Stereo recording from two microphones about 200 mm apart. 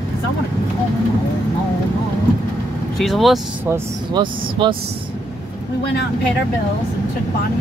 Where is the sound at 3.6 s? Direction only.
10° right (ahead or behind).